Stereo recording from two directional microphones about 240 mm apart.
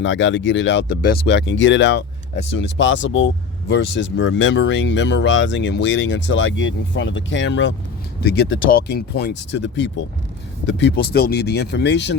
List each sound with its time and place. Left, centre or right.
0.0 s speech: left